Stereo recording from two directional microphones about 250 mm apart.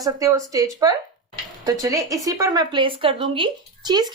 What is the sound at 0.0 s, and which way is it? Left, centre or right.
Speech, centre.